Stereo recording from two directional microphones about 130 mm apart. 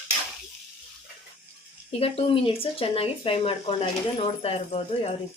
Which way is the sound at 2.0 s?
45° left (ahead or behind).